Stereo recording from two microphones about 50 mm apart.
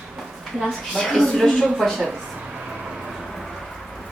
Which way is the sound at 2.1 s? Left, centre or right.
Centre.